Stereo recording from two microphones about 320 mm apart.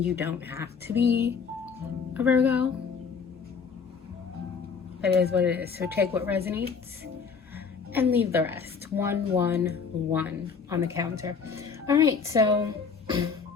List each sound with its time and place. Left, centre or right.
0.2 s speech: centre
2.1 s music: centre
4.9 s speech: centre
5.3 s music: centre
5.6 s speech: right
5.9 s speech: centre
7.5 s music: centre
9.0 s speech: centre